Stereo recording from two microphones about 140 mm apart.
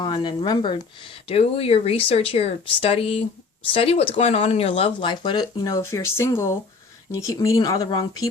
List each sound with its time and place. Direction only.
0.0 s speech: 30° left (ahead or behind)